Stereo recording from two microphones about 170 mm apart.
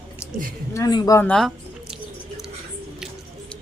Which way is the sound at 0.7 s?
20° left (ahead or behind).